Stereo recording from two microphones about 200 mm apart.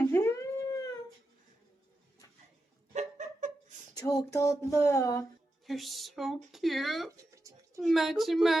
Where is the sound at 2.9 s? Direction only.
40° right (ahead or behind).